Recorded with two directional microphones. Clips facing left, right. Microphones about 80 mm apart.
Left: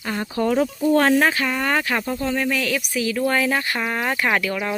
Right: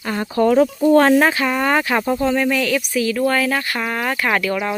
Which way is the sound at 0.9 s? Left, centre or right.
Right.